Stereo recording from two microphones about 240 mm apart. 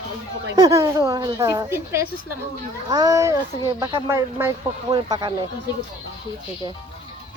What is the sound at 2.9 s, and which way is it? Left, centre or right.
Speech, centre.